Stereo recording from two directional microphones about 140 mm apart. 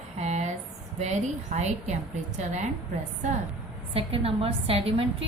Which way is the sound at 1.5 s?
55° right (ahead or behind).